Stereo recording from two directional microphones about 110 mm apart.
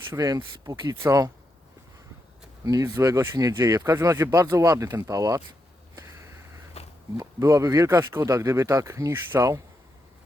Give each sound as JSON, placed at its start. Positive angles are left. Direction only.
{"t": 0.1, "sound": "speech", "side_deg": -30}
{"t": 2.6, "sound": "speech", "side_deg": -30}
{"t": 6.8, "sound": "walk", "side_deg": 70}
{"t": 7.2, "sound": "speech", "side_deg": -30}